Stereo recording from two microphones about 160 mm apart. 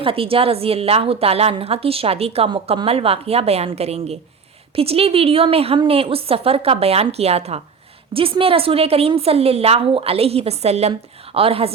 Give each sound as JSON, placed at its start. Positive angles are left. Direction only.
{"t": 0.0, "sound": "a woman's voice", "side_deg": -35}